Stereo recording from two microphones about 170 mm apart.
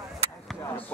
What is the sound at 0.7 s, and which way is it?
Speech, 10° left (ahead or behind).